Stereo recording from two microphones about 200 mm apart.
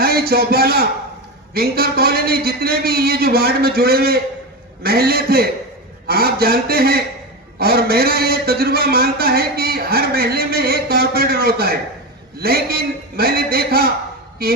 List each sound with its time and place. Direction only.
0.0 s a man's voice: 50° right (ahead or behind)